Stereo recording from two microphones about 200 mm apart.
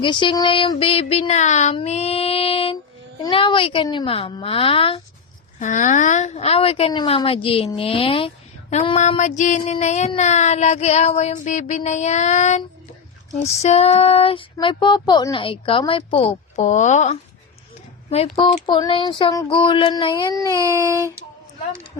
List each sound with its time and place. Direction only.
0.0 s speech: 25° left (ahead or behind)
5.5 s speech: 40° left (ahead or behind)
8.7 s child singing: 30° left (ahead or behind)
13.6 s speech: 30° left (ahead or behind)
16.6 s child singing: 35° left (ahead or behind)
18.4 s speech: 25° left (ahead or behind)
20.5 s a sound: 15° right (ahead or behind)